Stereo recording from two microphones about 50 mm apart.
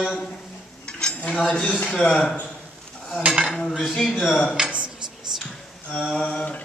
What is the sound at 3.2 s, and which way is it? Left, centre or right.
Cutlery, right.